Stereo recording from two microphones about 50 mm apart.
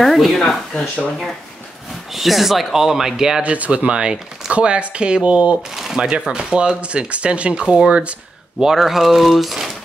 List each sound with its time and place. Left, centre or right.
0.0 s speech: centre
2.1 s speech: centre
3.4 s speech: right
5.8 s shuffling cards: centre
6.0 s speech: centre
8.5 s speech: centre